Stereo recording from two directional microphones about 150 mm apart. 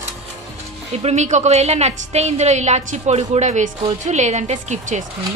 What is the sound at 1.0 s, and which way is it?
A woman's voice, 50° right (ahead or behind).